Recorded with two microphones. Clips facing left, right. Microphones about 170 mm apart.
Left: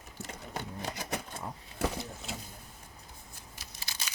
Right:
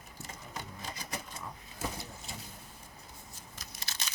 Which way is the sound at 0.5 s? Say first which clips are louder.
Left 6 dB; 65° left (ahead or behind).